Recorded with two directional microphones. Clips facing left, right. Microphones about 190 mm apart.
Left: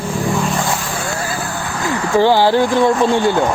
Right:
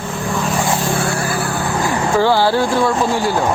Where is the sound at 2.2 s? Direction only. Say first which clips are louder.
Left 3 dB; 15° left (ahead or behind).